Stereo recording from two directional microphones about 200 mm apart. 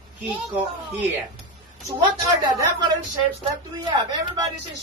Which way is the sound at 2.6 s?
20° right (ahead or behind).